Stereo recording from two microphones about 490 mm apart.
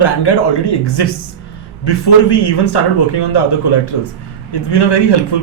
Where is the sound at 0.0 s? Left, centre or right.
Left.